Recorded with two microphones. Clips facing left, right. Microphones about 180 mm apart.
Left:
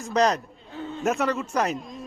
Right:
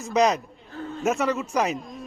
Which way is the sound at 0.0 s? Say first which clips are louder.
Right 1 dB; 10° right (ahead or behind).